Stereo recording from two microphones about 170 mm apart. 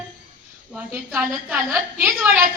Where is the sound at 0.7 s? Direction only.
10° right (ahead or behind).